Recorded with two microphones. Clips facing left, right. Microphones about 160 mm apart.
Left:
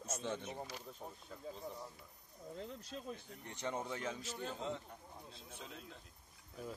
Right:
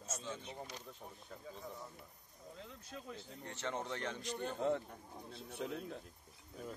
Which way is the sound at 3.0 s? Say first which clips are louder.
Even; 15° left (ahead or behind).